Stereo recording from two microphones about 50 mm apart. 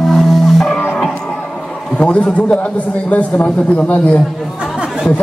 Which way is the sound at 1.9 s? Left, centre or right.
Left.